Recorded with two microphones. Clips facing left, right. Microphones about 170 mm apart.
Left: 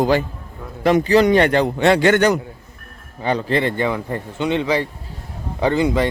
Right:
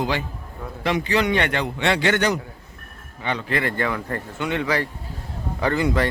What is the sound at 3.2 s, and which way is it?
Speech, 35° left (ahead or behind).